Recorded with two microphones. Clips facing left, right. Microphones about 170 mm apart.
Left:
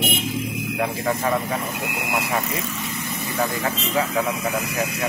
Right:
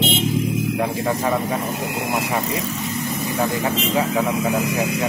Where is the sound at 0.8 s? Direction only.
15° right (ahead or behind).